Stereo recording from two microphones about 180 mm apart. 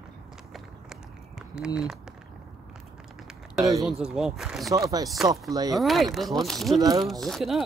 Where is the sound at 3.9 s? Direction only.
5° right (ahead or behind).